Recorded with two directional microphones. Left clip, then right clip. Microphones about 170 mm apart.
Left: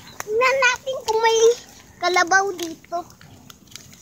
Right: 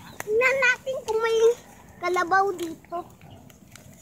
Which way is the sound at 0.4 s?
35° left (ahead or behind).